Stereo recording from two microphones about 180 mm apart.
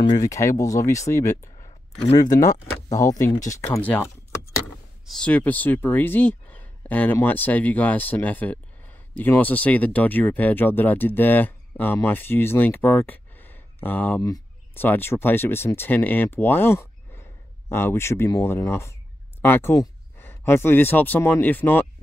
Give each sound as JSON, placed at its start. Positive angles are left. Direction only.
{"t": 0.0, "sound": "speech", "side_deg": 20}